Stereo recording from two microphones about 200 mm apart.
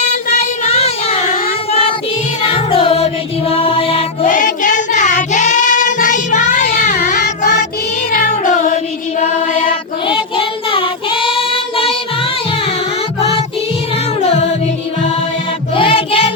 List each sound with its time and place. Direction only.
0.0 s child singing: 35° left (ahead or behind)
2.4 s music: 25° left (ahead or behind)
3.5 s child singing: 30° left (ahead or behind); by 7.6 s 50° left (ahead or behind)
8.1 s music: 40° left (ahead or behind)
10.1 s child singing: 25° left (ahead or behind)
15.7 s music: 25° left (ahead or behind)